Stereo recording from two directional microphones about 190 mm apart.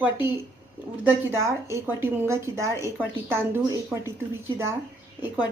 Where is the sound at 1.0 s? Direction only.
10° right (ahead or behind).